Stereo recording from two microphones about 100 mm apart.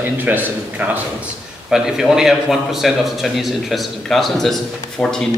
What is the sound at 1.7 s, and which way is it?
A man's voice, 5° right (ahead or behind).